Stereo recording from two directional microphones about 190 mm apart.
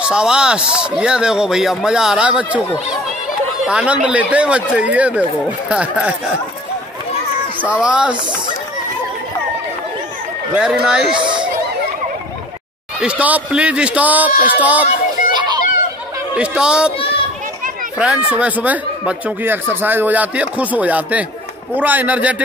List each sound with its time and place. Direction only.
0.0 s speech: 5° right (ahead or behind)
3.6 s speech: 5° right (ahead or behind)
7.6 s speech: 5° right (ahead or behind)
10.5 s speech: 5° right (ahead or behind)
11.1 s chatter: 25° right (ahead or behind)
13.0 s speech: 5° right (ahead or behind)
14.9 s a sound: 40° left (ahead or behind)
16.3 s speech: 5° right (ahead or behind)
17.9 s speech: 5° right (ahead or behind)